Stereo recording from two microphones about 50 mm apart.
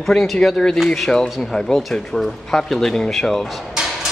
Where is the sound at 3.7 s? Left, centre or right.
Centre.